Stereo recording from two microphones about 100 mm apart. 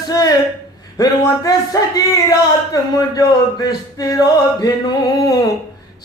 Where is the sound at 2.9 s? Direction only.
40° left (ahead or behind).